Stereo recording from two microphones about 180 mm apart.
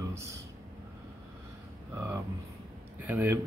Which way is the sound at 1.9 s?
15° right (ahead or behind).